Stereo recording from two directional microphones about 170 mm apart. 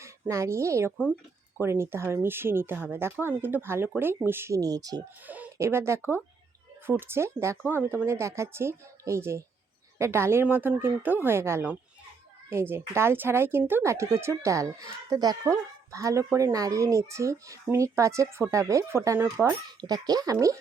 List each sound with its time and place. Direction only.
0.0 s speech: 15° right (ahead or behind)
5.2 s speech: 10° right (ahead or behind)